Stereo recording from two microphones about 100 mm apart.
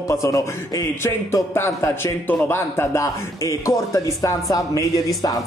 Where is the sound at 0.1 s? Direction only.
30° left (ahead or behind).